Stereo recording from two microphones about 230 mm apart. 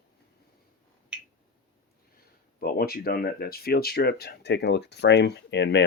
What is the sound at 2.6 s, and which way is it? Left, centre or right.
Speech, left.